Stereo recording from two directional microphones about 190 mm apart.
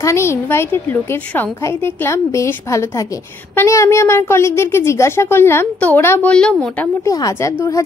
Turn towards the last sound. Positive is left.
turn(degrees=15)  # may be behind; listen again after turning